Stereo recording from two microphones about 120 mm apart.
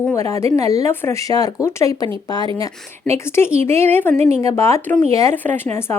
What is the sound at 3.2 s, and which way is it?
Speech, 20° left (ahead or behind).